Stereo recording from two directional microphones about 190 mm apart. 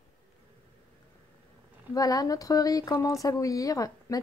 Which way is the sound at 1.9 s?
20° left (ahead or behind).